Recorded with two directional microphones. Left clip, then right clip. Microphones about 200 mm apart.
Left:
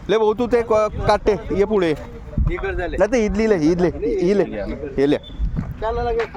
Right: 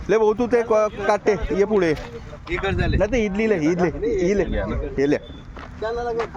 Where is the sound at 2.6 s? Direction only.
45° right (ahead or behind).